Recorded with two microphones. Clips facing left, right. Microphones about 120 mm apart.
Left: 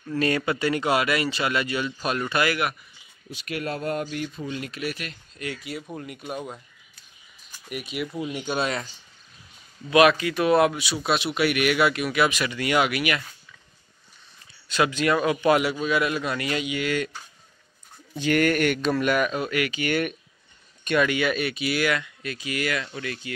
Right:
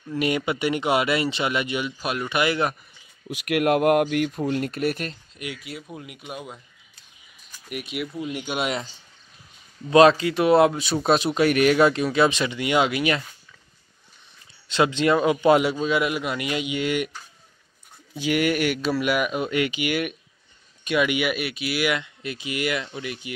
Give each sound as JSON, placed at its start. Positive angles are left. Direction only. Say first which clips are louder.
{"t": 0.1, "sound": "speech", "louder": "even", "side_deg": -15}
{"t": 3.3, "sound": "speech", "louder": "right 9 dB", "side_deg": -70}
{"t": 5.4, "sound": "speech", "louder": "left 2 dB", "side_deg": -5}
{"t": 7.9, "sound": "speech", "louder": "even", "side_deg": 0}
{"t": 9.8, "sound": "a man's voice", "louder": "right 3 dB", "side_deg": -30}
{"t": 10.8, "sound": "a man's voice", "louder": "right 5 dB", "side_deg": -40}
{"t": 14.7, "sound": "a man's voice", "louder": "right 2 dB", "side_deg": -25}
{"t": 18.1, "sound": "speech", "louder": "left 1 dB", "side_deg": -10}
{"t": 19.8, "sound": "speech", "louder": "even", "side_deg": -5}
{"t": 21.8, "sound": "a man's voice", "louder": "even", "side_deg": -20}